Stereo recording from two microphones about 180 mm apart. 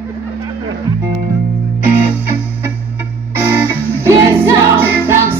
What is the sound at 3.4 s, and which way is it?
Music, 15° right (ahead or behind).